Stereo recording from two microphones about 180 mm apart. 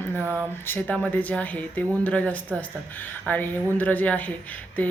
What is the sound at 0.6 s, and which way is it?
Speech, 10° left (ahead or behind).